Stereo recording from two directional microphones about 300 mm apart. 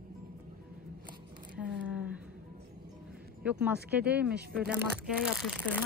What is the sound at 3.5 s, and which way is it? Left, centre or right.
A woman's voice, centre.